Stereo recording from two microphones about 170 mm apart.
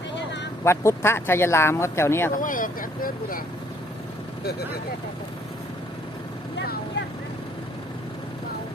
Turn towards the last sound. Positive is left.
turn(degrees=90)